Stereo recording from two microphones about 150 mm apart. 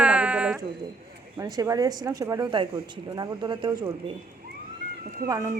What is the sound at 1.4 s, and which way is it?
Speech, 25° right (ahead or behind).